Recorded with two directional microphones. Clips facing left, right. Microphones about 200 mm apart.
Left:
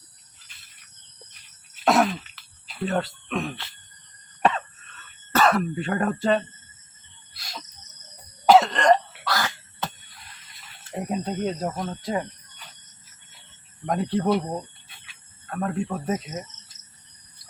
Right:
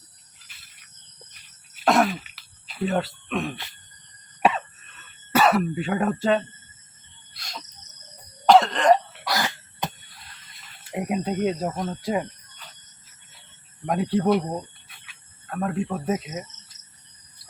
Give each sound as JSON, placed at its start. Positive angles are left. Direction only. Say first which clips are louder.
{"t": 1.8, "sound": "throat clearing", "louder": "even", "side_deg": 0}
{"t": 7.3, "sound": "cricket", "louder": "even", "side_deg": 0}
{"t": 8.4, "sound": "cough", "louder": "even", "side_deg": 0}
{"t": 9.2, "sound": "cough", "louder": "right 1 dB", "side_deg": -15}
{"t": 10.9, "sound": "speech", "louder": "right 2 dB", "side_deg": -10}
{"t": 13.8, "sound": "speech", "louder": "right 2 dB", "side_deg": -5}